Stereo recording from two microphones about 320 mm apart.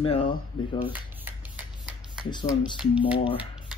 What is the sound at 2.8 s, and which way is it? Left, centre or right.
Speech, centre.